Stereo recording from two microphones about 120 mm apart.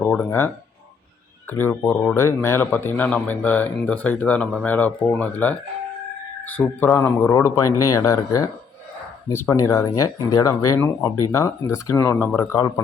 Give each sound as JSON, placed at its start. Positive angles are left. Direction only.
{"t": 0.0, "sound": "speech", "side_deg": 15}